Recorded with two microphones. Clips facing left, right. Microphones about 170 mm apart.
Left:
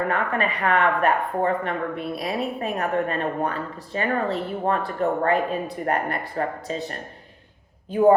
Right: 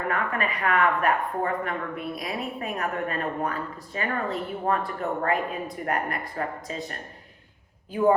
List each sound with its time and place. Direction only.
0.1 s speech: 30° left (ahead or behind)